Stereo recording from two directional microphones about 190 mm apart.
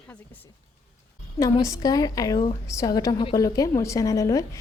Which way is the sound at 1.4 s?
15° left (ahead or behind).